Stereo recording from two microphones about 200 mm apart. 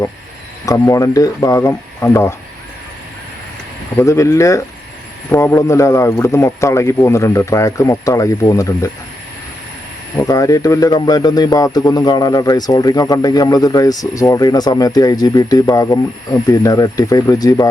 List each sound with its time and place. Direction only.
0.6 s a man's voice: 15° left (ahead or behind)
3.9 s a man's voice: 15° left (ahead or behind)
10.2 s a man's voice: 15° left (ahead or behind)